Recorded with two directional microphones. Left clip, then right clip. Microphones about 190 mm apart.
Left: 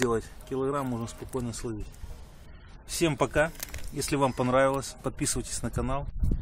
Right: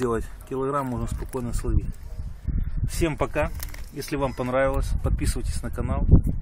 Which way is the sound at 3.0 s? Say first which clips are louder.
Even; centre (ahead or behind).